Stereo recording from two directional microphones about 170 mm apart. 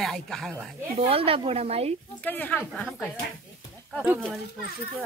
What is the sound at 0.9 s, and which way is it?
Speech, 35° right (ahead or behind).